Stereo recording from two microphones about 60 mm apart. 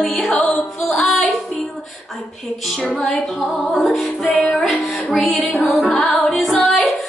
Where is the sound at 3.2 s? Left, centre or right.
Centre.